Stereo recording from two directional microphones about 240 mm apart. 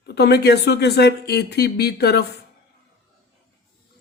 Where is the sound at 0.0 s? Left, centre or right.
Left.